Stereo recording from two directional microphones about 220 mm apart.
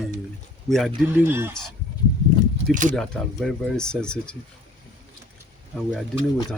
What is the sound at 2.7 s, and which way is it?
Speech, 35° right (ahead or behind).